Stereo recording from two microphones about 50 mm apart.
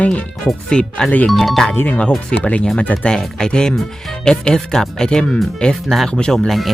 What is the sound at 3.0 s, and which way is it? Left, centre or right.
Speech, centre.